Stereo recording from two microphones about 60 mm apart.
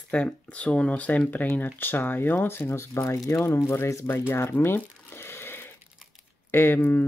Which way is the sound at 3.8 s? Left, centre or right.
Left.